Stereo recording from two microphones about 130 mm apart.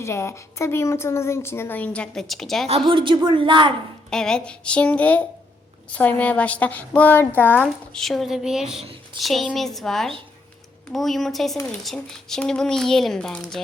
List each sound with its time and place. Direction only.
0.0 s a woman's voice: 20° left (ahead or behind); by 2.6 s centre (ahead or behind)
2.6 s a woman's voice: 45° right (ahead or behind)
4.1 s a woman's voice: 5° left (ahead or behind)
7.9 s speech: centre (ahead or behind)